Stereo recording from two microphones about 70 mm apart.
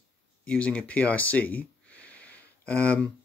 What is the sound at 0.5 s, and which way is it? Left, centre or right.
Speech, centre.